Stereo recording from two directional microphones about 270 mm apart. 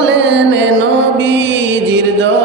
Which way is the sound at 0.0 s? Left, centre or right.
Right.